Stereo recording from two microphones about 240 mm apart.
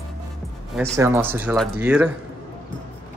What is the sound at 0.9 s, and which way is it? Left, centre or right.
Speech, centre.